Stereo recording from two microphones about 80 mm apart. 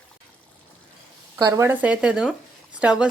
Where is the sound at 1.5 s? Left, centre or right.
Right.